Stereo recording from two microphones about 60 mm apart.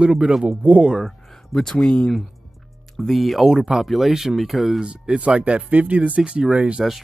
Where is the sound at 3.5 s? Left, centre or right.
Centre.